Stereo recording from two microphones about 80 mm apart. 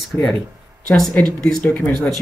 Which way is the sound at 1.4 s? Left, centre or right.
Centre.